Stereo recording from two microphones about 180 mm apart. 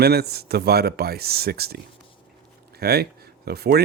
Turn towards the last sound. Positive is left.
turn(degrees=-60)  # may be behind; listen again after turning